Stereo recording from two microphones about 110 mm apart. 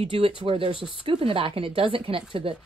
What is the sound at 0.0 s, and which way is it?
Speech, 60° right (ahead or behind).